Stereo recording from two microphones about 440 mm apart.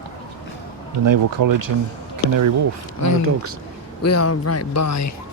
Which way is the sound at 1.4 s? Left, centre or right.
Right.